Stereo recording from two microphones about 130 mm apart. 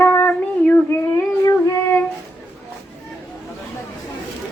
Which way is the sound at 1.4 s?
20° left (ahead or behind).